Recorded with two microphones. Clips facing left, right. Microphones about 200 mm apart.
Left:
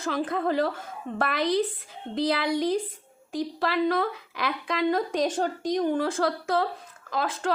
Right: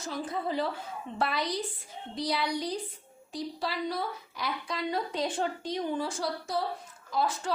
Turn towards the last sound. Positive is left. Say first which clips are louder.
# left 3 dB
turn(degrees=90)